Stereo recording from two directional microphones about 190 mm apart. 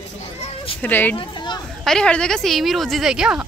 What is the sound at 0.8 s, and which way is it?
Speech, 10° left (ahead or behind).